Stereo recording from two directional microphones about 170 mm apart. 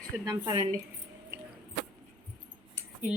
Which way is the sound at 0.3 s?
25° right (ahead or behind).